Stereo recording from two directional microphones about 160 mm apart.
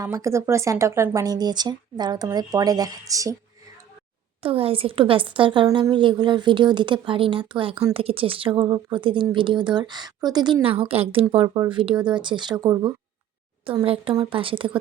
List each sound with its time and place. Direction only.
0.0 s speech: 20° right (ahead or behind)
4.4 s a woman's voice: 35° right (ahead or behind)
13.8 s a woman's voice: 35° right (ahead or behind)